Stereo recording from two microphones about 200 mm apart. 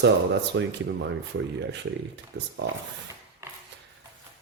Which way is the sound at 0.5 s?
65° right (ahead or behind).